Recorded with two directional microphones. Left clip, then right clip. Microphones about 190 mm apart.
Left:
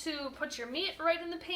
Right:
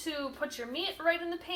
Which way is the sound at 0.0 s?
20° left (ahead or behind).